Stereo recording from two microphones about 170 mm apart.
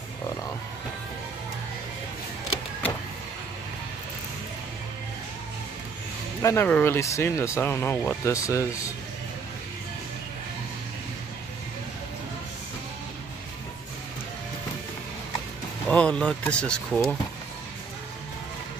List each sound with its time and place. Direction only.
6.4 s speech: 15° left (ahead or behind)
15.9 s speech: 5° left (ahead or behind)